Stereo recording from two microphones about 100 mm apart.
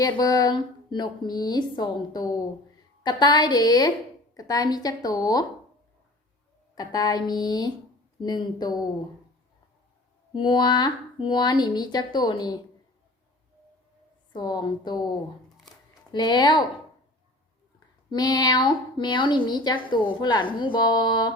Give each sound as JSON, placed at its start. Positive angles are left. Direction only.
{"t": 0.0, "sound": "a woman's voice", "side_deg": 40}
{"t": 6.7, "sound": "a woman's voice", "side_deg": 45}
{"t": 10.3, "sound": "a woman's voice", "side_deg": 50}
{"t": 14.3, "sound": "a woman's voice", "side_deg": 45}
{"t": 18.1, "sound": "a woman's voice", "side_deg": 45}